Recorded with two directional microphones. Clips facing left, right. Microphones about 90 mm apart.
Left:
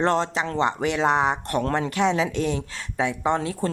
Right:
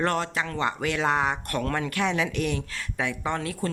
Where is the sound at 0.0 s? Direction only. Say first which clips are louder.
Left 4 dB; 25° left (ahead or behind).